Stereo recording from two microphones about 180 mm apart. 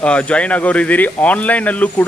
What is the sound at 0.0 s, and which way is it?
Speech, 5° left (ahead or behind).